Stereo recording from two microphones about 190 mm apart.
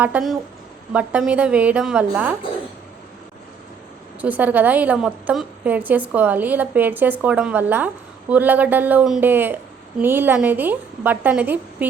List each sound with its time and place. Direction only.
0.0 s a woman's voice: 5° right (ahead or behind)
4.2 s a woman's voice: 10° right (ahead or behind)